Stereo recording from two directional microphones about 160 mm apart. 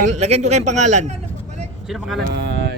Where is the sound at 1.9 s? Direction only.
Centre (ahead or behind).